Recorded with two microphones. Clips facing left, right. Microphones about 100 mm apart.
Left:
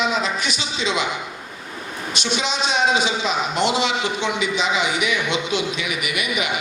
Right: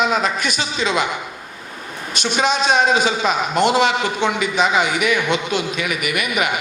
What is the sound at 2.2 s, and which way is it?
A man's voice, 50° right (ahead or behind).